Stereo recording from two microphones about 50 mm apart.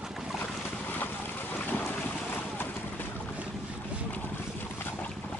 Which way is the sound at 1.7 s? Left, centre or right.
Left.